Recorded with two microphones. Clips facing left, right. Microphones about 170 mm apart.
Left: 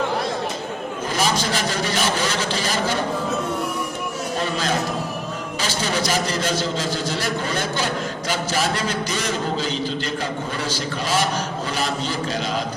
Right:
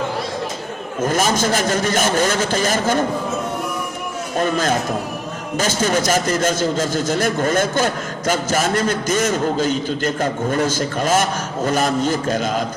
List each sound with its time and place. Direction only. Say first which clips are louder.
1.0 s a man's voice: right 5 dB; 45° right (ahead or behind)
4.4 s a man's voice: right 6 dB; 50° right (ahead or behind)